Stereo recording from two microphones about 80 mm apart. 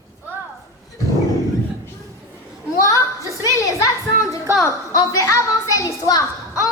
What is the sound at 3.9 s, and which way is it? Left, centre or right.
Music, left.